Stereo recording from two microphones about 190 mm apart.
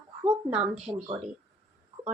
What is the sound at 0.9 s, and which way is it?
Speech, 25° right (ahead or behind).